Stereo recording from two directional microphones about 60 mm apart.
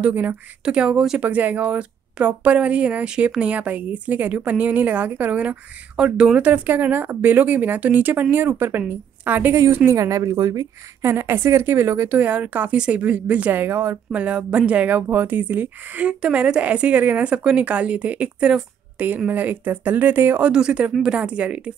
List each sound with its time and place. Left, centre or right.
0.1 s a woman's voice: right
0.7 s speech: centre
1.2 s a woman's voice: right
5.9 s a woman's voice: centre; by 9.6 s right
9.9 s speech: right
11.0 s a woman's voice: right
12.1 s a woman's voice: right
12.7 s a woman's voice: centre; by 13.9 s right
14.1 s a woman's voice: right
20.4 s a woman's voice: centre